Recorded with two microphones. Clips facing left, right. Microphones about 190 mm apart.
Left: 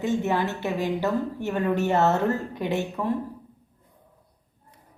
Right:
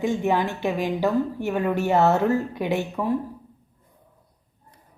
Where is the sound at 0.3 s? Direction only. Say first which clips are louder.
Right 3 dB; 15° right (ahead or behind).